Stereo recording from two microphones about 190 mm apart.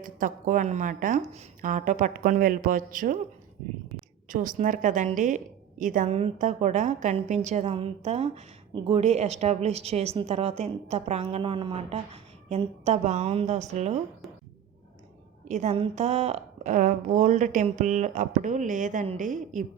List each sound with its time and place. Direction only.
0.0 s speech: 45° right (ahead or behind)
4.3 s a woman's voice: 45° right (ahead or behind)
15.4 s a woman's voice: 40° right (ahead or behind)